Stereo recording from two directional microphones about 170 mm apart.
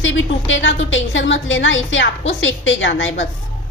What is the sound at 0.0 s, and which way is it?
A woman's voice, 90° left.